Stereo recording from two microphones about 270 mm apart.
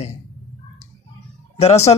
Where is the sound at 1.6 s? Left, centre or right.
Left.